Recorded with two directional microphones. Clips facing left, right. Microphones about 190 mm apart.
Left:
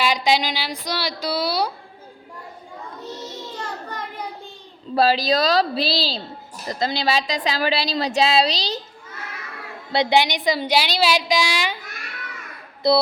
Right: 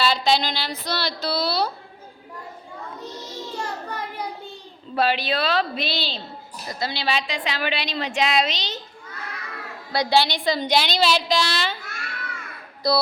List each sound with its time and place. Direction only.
0.0 s a woman's voice: 15° left (ahead or behind)
3.6 s a sound: 10° right (ahead or behind)
4.9 s a woman's voice: 35° left (ahead or behind)
9.9 s a woman's voice: 20° left (ahead or behind)
12.8 s music: 25° left (ahead or behind)